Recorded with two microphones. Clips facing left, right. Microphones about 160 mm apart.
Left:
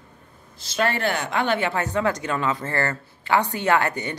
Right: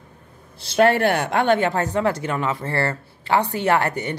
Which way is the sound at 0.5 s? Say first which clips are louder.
Right 7 dB; 60° right (ahead or behind).